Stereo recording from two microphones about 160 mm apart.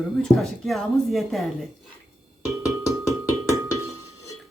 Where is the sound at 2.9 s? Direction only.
15° right (ahead or behind).